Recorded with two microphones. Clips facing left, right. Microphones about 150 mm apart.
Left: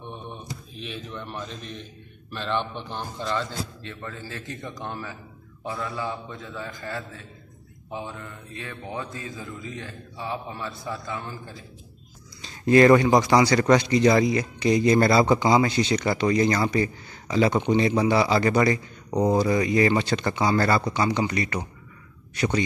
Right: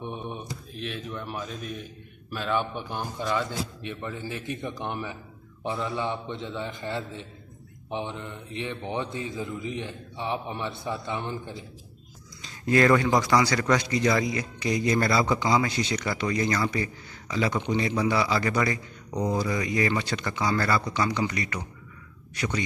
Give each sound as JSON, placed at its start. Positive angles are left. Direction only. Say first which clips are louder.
{"t": 0.0, "sound": "mantra", "louder": "right 3 dB", "side_deg": -15}
{"t": 0.7, "sound": "a man's voice", "louder": "right 2 dB", "side_deg": 0}
{"t": 12.4, "sound": "a man's voice", "louder": "left 6 dB", "side_deg": 25}